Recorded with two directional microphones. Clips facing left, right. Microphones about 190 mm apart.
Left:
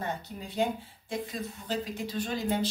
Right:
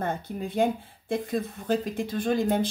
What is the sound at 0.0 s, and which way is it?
Speech, 55° right (ahead or behind).